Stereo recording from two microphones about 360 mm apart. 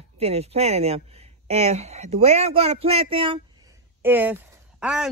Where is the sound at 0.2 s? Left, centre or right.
Centre.